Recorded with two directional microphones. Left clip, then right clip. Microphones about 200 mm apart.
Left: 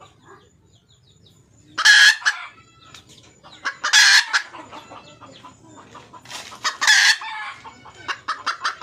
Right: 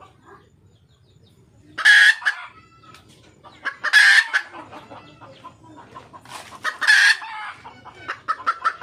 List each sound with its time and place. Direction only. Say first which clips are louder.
1.8 s chicken: left 1 dB; centre (ahead or behind)
3.6 s chicken: even; centre (ahead or behind)
6.2 s chicken: left 2 dB; 10° left (ahead or behind)
8.0 s fowl: right 2 dB; 10° left (ahead or behind)